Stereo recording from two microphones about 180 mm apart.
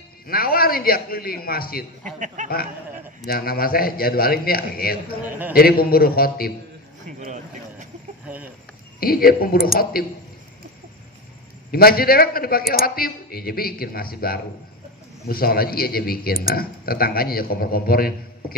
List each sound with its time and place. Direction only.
0.3 s speech: 55° left (ahead or behind)
2.1 s speech: 45° right (ahead or behind)
3.3 s speech: 55° left (ahead or behind)
9.0 s speech: 55° left (ahead or behind)
11.7 s speech: 55° left (ahead or behind)